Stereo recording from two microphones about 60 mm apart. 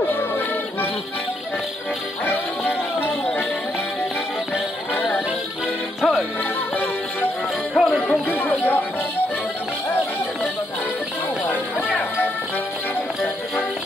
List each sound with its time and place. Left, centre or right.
2.2 s music: left
5.9 s music: centre
7.7 s music: centre
8.3 s chatter: left
11.5 s music: left